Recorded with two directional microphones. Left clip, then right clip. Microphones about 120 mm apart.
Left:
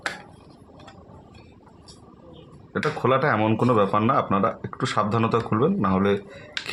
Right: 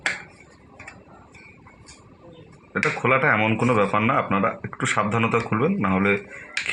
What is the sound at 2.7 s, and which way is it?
Speech, 30° left (ahead or behind).